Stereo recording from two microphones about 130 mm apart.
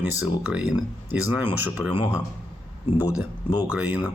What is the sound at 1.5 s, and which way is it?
Speech, 15° right (ahead or behind).